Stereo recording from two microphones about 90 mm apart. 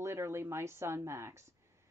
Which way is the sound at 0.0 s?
30° right (ahead or behind).